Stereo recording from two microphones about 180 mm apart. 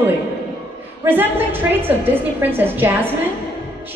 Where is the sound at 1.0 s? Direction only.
10° right (ahead or behind).